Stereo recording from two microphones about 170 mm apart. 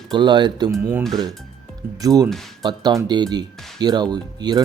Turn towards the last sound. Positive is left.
turn(degrees=-25)  # may be behind; listen again after turning